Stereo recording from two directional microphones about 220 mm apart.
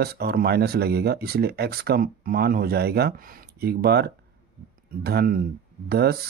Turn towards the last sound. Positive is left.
turn(degrees=-45)  # may be behind; listen again after turning